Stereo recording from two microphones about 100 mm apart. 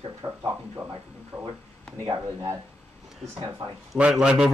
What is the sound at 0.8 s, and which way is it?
Speech, 15° right (ahead or behind).